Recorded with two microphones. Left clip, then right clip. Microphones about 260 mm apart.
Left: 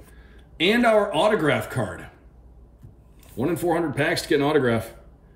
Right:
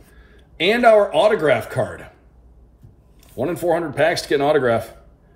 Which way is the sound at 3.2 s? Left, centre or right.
Centre.